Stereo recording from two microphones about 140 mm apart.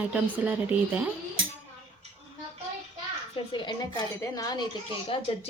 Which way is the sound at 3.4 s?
40° left (ahead or behind).